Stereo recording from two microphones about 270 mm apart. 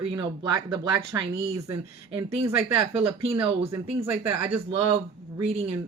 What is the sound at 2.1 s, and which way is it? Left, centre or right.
Speech, right.